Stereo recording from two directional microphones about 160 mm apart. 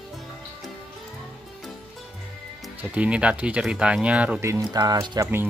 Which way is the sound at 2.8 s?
10° right (ahead or behind).